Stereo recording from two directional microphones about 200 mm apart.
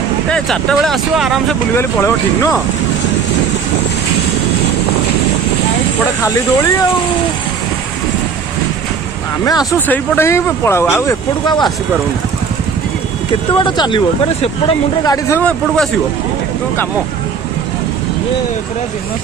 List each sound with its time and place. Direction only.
0.3 s speech: 5° left (ahead or behind)
1.7 s speech: 10° left (ahead or behind)
6.2 s speech: 15° left (ahead or behind)
9.4 s speech: 15° left (ahead or behind)
13.5 s speech: 25° left (ahead or behind)
15.0 s speech: 15° left (ahead or behind)
15.4 s speech: 5° left (ahead or behind)